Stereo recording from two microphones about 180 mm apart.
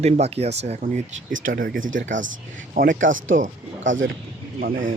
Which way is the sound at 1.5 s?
50° right (ahead or behind).